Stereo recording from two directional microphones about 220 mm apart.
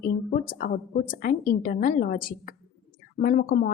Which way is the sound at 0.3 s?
40° left (ahead or behind).